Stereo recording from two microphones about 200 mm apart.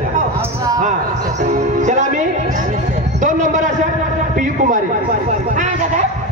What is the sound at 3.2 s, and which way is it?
Speech, 40° right (ahead or behind).